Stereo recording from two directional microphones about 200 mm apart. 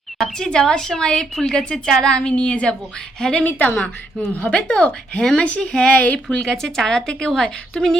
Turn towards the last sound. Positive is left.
turn(degrees=5)  # may be behind; listen again after turning